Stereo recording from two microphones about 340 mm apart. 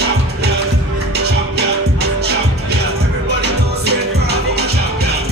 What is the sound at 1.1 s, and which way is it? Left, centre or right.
Music, right.